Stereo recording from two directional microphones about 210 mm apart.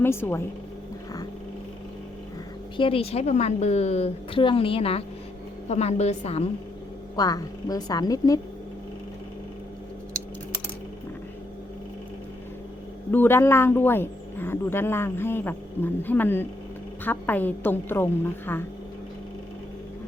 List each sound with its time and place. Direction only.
0.0 s speech: 10° left (ahead or behind)
2.7 s a woman's voice: 25° left (ahead or behind)
7.2 s speech: 15° left (ahead or behind)
13.1 s speech: 10° left (ahead or behind)